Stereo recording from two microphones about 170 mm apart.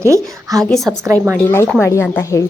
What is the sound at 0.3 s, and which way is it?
Speech, 20° right (ahead or behind).